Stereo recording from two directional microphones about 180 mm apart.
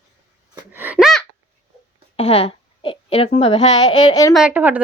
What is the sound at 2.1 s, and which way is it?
A woman's voice, 35° left (ahead or behind).